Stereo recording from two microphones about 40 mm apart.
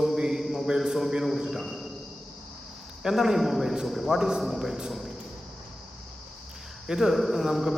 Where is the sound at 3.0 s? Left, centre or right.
Centre.